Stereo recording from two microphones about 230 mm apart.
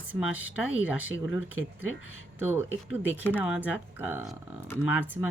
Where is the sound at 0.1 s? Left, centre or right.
Centre.